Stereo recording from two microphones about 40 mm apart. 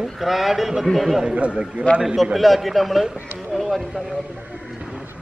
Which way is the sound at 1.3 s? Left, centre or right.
Right.